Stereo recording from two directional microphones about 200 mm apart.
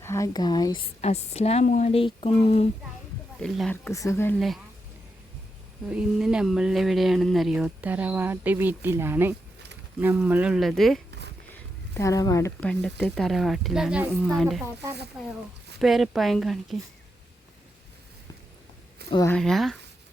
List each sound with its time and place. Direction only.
0.0 s speech: 15° left (ahead or behind)
1.0 s speech: 30° left (ahead or behind)
3.4 s speech: 5° left (ahead or behind)
4.4 s speech: centre (ahead or behind)
5.8 s speech: 5° right (ahead or behind)
11.5 s speech: 15° left (ahead or behind)
15.8 s speech: centre (ahead or behind)
19.3 s speech: centre (ahead or behind)